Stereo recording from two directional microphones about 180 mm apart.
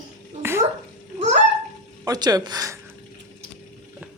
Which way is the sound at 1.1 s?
40° right (ahead or behind).